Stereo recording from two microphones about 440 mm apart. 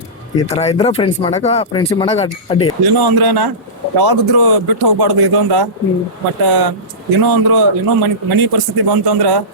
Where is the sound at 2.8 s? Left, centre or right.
Right.